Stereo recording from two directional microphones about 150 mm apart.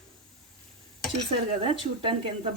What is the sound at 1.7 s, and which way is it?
Speech, 35° right (ahead or behind).